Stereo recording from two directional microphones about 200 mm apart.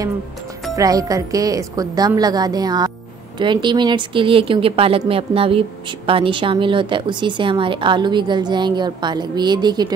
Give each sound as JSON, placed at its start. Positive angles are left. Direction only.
{"t": 0.7, "sound": "a woman's voice", "side_deg": -15}